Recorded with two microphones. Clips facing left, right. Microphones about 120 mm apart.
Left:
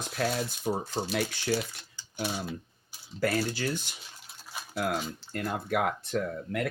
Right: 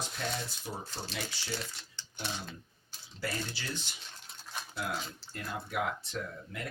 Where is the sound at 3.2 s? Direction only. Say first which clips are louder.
Left 10 dB; 50° left (ahead or behind).